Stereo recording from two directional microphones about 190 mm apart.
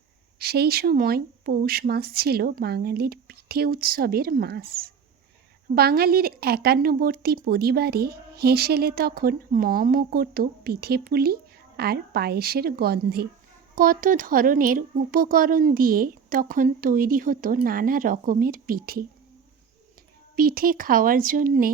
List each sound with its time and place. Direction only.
0.3 s a woman's voice: 55° right (ahead or behind)
20.3 s speech: 50° right (ahead or behind)